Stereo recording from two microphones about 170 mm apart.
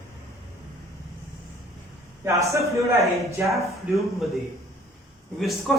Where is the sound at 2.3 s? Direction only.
20° right (ahead or behind).